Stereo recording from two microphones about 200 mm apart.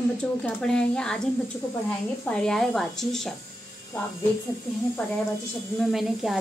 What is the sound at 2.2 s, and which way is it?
A woman's voice, 5° left (ahead or behind).